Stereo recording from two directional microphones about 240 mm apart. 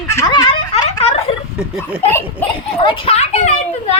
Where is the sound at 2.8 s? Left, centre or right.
Left.